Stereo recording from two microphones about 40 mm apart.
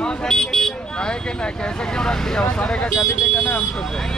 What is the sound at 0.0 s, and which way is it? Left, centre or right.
Vehicle, centre.